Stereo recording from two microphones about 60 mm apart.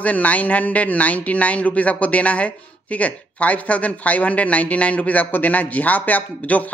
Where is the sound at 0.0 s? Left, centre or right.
Left.